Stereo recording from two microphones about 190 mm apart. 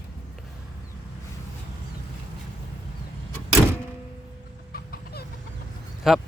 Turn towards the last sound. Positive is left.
turn(degrees=0)  # may be behind; listen again after turning